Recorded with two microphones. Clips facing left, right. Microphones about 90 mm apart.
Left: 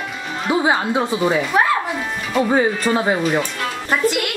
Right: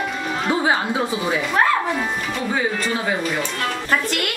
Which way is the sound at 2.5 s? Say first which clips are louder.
Left 4 dB; 35° left (ahead or behind).